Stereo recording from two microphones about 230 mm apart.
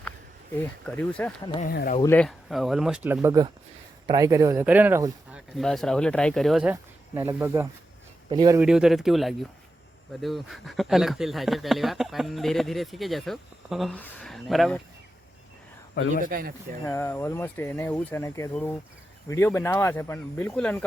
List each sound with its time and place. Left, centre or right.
0.9 s speech: centre
1.6 s speech: left
2.0 s speech: centre
5.5 s speech: centre
8.3 s speech: right
8.5 s speech: centre
16.2 s speech: right
16.8 s speech: centre